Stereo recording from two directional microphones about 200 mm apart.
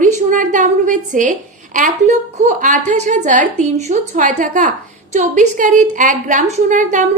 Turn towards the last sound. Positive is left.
turn(degrees=-40)  # may be behind; listen again after turning